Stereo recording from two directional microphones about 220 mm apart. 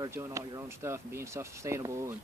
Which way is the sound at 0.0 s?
10° right (ahead or behind).